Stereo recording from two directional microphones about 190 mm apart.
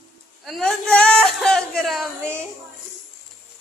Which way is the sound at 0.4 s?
Centre (ahead or behind).